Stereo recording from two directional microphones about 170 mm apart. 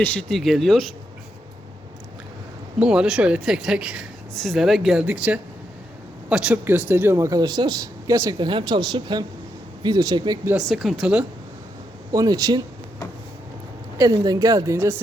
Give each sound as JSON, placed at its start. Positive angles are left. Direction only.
{"t": 0.0, "sound": "speech", "side_deg": 5}
{"t": 2.7, "sound": "speech", "side_deg": -5}
{"t": 10.7, "sound": "speech", "side_deg": 0}
{"t": 12.1, "sound": "speech", "side_deg": -20}
{"t": 14.0, "sound": "speech", "side_deg": -20}